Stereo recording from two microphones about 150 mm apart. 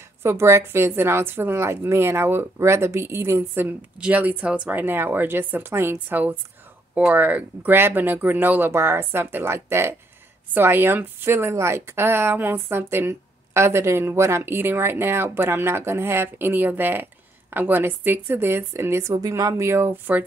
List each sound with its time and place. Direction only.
0.2 s a woman's voice: 15° right (ahead or behind)